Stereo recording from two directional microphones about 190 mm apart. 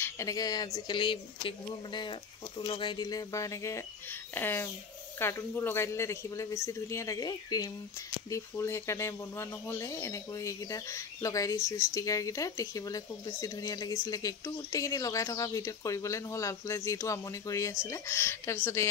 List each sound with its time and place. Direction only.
0.0 s speech: 20° left (ahead or behind)